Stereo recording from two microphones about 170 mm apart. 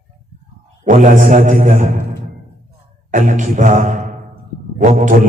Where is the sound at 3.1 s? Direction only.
50° right (ahead or behind).